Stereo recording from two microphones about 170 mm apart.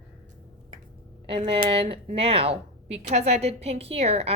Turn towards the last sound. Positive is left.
turn(degrees=-40)  # may be behind; listen again after turning